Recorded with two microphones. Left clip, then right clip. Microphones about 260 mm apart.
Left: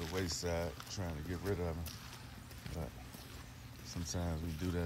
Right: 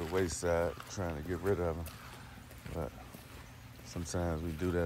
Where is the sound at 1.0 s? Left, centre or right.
Right.